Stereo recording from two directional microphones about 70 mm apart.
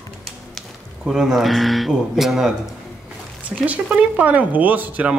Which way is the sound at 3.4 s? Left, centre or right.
Right.